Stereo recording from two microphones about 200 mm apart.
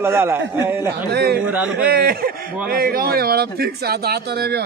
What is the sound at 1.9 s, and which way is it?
Speech, 50° right (ahead or behind).